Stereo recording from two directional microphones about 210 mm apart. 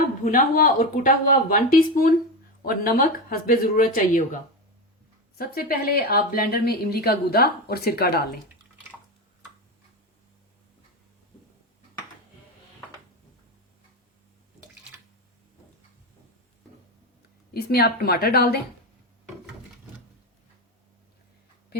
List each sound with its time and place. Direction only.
0.3 s speech: 40° left (ahead or behind)
5.4 s speech: 45° left (ahead or behind)
17.5 s speech: 45° left (ahead or behind)